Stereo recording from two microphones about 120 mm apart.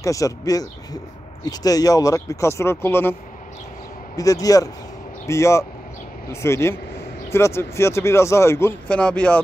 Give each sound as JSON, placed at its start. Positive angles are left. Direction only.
{"t": 0.0, "sound": "speech", "side_deg": 30}
{"t": 4.2, "sound": "speech", "side_deg": 30}
{"t": 8.8, "sound": "speech", "side_deg": 10}